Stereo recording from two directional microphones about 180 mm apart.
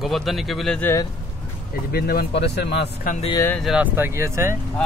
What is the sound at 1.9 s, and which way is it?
Speech, 60° left (ahead or behind).